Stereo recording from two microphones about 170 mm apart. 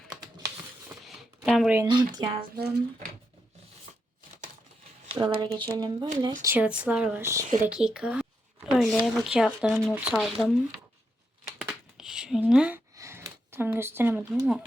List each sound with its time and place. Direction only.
1.5 s speech: centre (ahead or behind)
1.9 s speech: 25° right (ahead or behind)
2.6 s speech: 65° right (ahead or behind)
5.2 s speech: 25° right (ahead or behind)
6.4 s a woman's voice: 10° right (ahead or behind)
7.7 s speech: 5° right (ahead or behind)
11.4 s a sound: centre (ahead or behind)
13.0 s speech: 15° right (ahead or behind)